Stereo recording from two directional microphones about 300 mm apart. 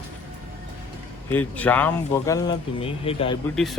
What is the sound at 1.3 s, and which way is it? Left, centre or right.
Speech, centre.